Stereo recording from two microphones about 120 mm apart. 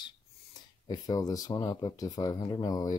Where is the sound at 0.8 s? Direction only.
30° left (ahead or behind).